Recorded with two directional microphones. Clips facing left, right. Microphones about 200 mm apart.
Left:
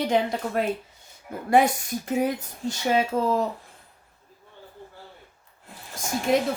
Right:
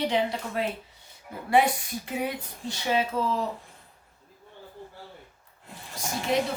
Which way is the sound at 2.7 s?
45° left (ahead or behind).